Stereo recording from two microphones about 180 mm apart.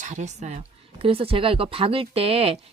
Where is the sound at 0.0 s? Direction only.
40° right (ahead or behind).